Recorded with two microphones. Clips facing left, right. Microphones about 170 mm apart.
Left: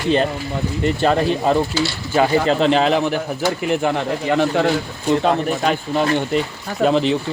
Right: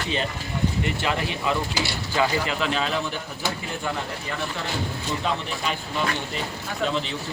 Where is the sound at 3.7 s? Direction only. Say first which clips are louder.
Left 11 dB; 70° left (ahead or behind); by 6.2 s 45° left (ahead or behind).